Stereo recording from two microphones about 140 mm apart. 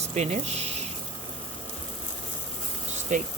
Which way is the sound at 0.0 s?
55° right (ahead or behind).